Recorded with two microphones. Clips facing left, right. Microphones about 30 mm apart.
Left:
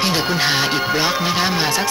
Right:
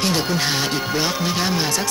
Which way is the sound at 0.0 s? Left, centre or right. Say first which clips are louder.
Left 2 dB; left.